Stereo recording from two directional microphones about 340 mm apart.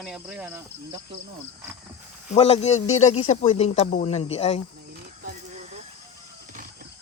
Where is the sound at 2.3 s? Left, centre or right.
Centre.